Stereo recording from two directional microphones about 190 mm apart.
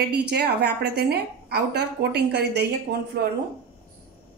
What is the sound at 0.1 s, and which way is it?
A woman's voice, 55° right (ahead or behind).